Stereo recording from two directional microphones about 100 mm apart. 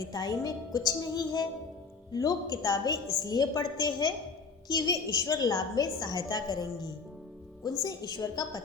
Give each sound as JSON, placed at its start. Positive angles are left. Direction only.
{"t": 0.0, "sound": "a woman's voice", "side_deg": 40}